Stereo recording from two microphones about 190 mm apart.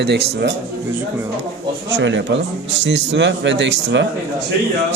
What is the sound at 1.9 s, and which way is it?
A man's voice, 70° right (ahead or behind).